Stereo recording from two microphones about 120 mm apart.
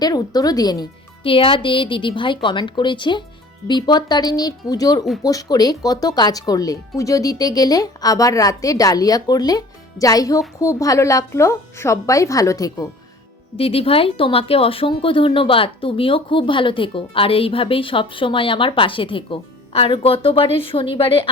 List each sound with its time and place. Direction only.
0.0 s speech: 35° left (ahead or behind)
1.2 s speech: 50° left (ahead or behind); by 12.9 s 30° left (ahead or behind)
13.6 s speech: 55° left (ahead or behind)